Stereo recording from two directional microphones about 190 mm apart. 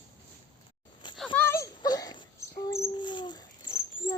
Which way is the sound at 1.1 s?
5° left (ahead or behind).